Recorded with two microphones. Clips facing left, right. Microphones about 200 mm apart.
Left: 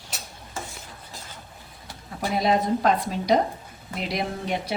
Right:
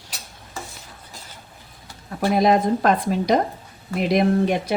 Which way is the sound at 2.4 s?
55° right (ahead or behind).